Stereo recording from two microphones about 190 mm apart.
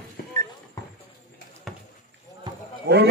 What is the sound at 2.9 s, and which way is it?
Speech, 55° right (ahead or behind).